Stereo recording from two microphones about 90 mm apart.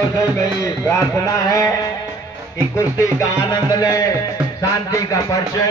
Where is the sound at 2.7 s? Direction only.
35° left (ahead or behind).